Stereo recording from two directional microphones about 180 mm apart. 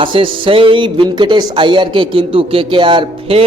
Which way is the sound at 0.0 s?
30° right (ahead or behind).